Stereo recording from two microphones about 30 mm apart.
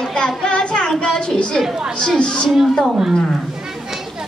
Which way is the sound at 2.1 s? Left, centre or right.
Left.